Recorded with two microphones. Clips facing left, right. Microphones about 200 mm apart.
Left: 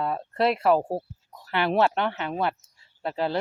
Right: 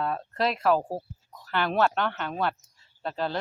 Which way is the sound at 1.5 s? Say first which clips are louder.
Left 2 dB; 15° left (ahead or behind).